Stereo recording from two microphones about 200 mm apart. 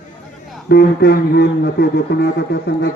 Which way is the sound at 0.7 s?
50° left (ahead or behind).